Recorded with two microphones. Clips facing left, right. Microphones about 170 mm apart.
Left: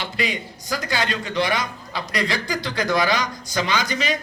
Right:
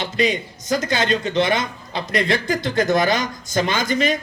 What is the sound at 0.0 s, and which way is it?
A man's voice, 20° right (ahead or behind).